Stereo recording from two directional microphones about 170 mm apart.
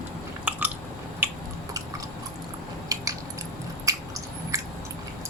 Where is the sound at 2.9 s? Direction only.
20° right (ahead or behind).